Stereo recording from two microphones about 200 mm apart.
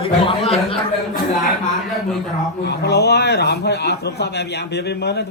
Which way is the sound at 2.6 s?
55° left (ahead or behind).